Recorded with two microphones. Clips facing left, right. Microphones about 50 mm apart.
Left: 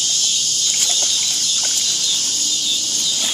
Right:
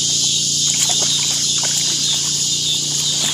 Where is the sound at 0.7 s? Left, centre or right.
Centre.